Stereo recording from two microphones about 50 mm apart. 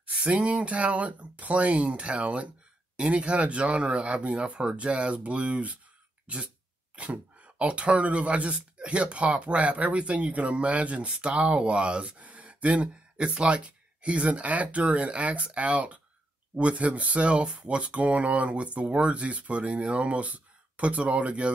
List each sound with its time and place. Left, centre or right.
0.0 s speech: right
6.2 s throat clearing: right
7.0 s speech: right